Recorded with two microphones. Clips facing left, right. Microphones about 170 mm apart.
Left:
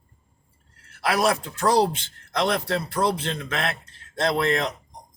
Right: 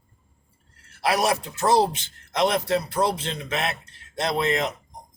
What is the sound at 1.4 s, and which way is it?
Speech, 25° right (ahead or behind).